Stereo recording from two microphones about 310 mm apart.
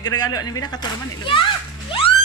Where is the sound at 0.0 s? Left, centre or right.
Centre.